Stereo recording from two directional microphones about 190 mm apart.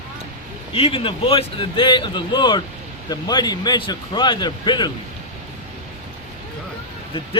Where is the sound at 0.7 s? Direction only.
30° left (ahead or behind).